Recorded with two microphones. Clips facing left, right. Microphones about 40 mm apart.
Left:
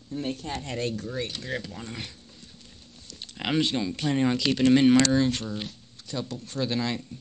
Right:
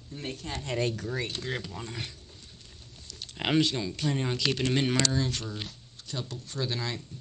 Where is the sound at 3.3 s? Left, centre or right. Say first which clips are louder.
Right 1 dB; centre.